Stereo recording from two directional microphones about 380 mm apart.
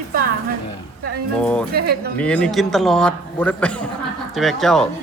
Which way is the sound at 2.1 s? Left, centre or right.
Centre.